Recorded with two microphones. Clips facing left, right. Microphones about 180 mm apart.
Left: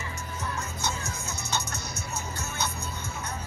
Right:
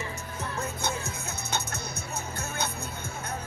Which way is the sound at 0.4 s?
60° right (ahead or behind).